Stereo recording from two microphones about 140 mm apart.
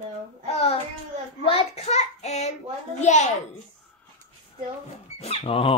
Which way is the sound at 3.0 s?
55° left (ahead or behind).